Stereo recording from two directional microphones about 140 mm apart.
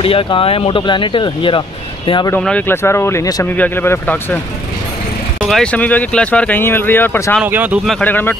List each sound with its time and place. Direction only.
0.0 s speech: 40° left (ahead or behind)
2.3 s speech: 10° left (ahead or behind)
3.4 s speech: 15° left (ahead or behind)
5.4 s speech: 5° left (ahead or behind)
7.4 s speech: 10° right (ahead or behind)
8.0 s speech: 15° left (ahead or behind)